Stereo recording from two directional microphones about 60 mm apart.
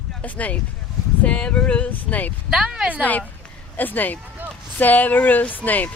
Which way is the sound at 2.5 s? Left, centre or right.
Centre.